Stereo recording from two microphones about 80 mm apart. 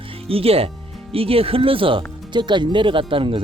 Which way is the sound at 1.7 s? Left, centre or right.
Right.